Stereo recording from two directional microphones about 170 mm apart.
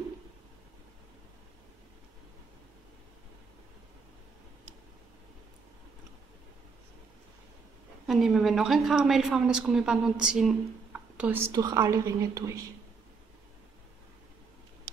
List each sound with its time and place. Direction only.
8.1 s a woman's voice: centre (ahead or behind)
11.5 s a woman's voice: 20° right (ahead or behind)